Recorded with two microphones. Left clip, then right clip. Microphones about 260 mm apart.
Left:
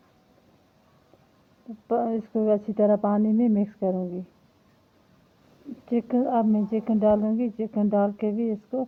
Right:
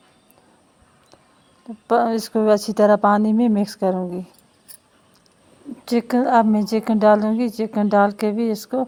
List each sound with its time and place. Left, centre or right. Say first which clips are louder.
1.9 s speech: right 8 dB; right
5.8 s speech: right 6 dB; right